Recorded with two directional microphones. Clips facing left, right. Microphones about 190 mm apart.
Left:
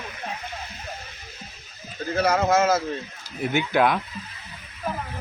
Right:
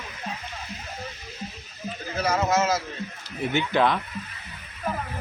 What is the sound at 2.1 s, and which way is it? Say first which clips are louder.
Speech: left 3 dB; 55° left (ahead or behind).